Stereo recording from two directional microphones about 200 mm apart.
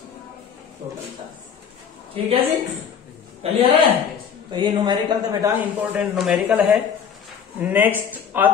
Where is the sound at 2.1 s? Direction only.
25° right (ahead or behind).